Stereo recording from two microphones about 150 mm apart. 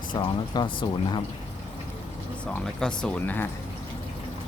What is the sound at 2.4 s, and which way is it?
Speech, 5° left (ahead or behind).